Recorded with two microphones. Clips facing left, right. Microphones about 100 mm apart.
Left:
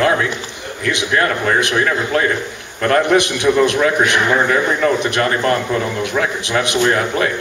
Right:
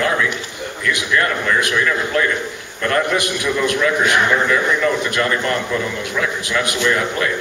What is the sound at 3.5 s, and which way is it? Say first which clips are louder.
A man's voice: left 4 dB; 45° left (ahead or behind).